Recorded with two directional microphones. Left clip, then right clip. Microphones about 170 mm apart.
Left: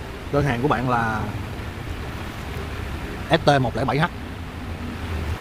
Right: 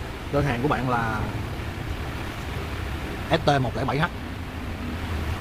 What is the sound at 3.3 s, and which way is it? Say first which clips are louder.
Speech: left 4 dB; 55° left (ahead or behind).